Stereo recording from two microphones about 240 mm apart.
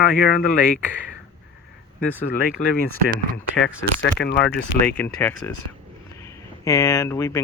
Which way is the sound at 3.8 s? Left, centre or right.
Left.